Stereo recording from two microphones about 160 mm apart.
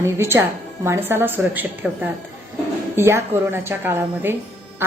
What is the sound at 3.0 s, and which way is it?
A woman's voice, 15° right (ahead or behind).